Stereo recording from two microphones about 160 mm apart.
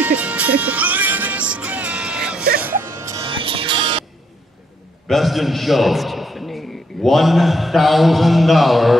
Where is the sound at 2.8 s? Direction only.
20° right (ahead or behind).